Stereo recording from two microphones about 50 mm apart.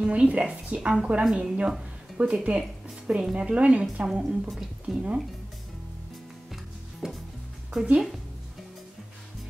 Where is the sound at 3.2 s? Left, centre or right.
Centre.